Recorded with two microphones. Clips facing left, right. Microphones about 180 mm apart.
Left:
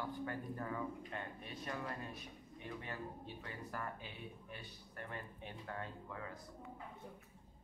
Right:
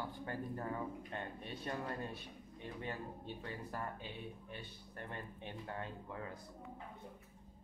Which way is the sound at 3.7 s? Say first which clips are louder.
Right 2 dB; 30° right (ahead or behind).